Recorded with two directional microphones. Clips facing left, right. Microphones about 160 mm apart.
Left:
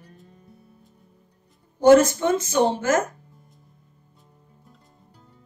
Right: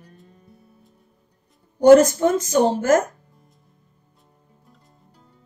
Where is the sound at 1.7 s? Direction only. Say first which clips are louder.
Right 3 dB; 45° right (ahead or behind).